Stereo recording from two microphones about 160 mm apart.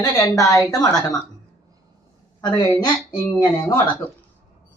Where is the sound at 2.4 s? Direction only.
30° left (ahead or behind).